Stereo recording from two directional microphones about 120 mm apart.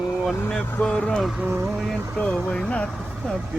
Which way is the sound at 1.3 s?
15° right (ahead or behind).